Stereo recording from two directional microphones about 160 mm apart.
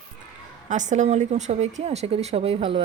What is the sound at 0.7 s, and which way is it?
A woman's voice, 50° right (ahead or behind).